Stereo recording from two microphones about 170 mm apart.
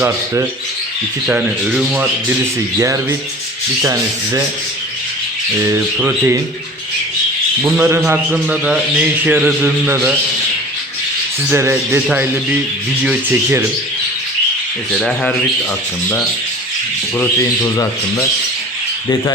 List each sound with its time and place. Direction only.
1.3 s a man's voice: 5° right (ahead or behind)
3.8 s rub: 20° right (ahead or behind)
5.6 s a man's voice: 15° right (ahead or behind)
7.6 s a man's voice: 15° right (ahead or behind)
11.4 s a man's voice: 15° right (ahead or behind)
14.9 s speech: centre (ahead or behind)
17.2 s speech: 15° left (ahead or behind)